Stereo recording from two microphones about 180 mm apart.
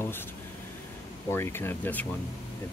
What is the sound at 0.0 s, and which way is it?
Air conditioning, 10° left (ahead or behind).